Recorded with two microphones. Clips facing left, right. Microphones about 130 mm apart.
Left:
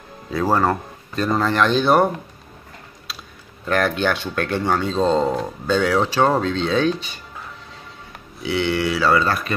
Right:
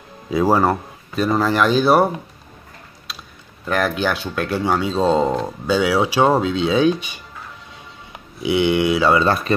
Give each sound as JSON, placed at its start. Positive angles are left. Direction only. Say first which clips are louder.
{"t": 0.3, "sound": "speech", "louder": "right 3 dB", "side_deg": -10}
{"t": 3.1, "sound": "a sound", "louder": "right 1 dB", "side_deg": 0}
{"t": 3.6, "sound": "speech", "louder": "even", "side_deg": -5}